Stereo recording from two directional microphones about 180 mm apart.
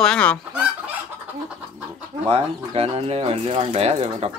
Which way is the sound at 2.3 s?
35° right (ahead or behind).